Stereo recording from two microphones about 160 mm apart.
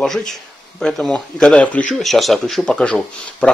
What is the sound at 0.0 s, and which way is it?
Speech, centre (ahead or behind).